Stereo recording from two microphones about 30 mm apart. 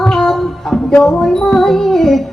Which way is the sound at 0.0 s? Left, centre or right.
Centre.